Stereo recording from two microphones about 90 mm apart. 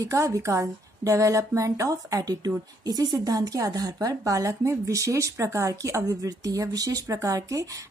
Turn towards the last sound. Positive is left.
turn(degrees=-40)  # may be behind; listen again after turning